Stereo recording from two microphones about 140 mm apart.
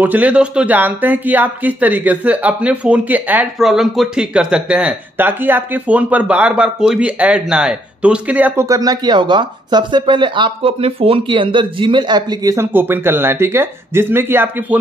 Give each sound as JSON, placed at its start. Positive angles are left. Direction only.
{"t": 0.0, "sound": "speech", "side_deg": -10}
{"t": 3.5, "sound": "speech", "side_deg": 0}
{"t": 8.6, "sound": "speech", "side_deg": -25}
{"t": 12.5, "sound": "speech", "side_deg": -15}